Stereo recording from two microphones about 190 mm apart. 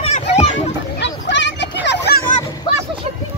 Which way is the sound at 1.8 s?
60° left (ahead or behind).